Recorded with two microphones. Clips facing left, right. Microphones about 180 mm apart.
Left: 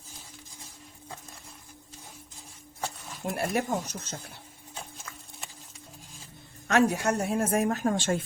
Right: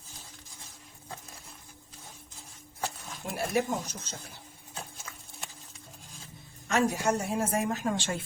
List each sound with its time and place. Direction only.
3.3 s a woman's voice: 55° left (ahead or behind)
4.7 s horse: centre (ahead or behind)
6.7 s a woman's voice: 65° left (ahead or behind); by 8.2 s 45° left (ahead or behind)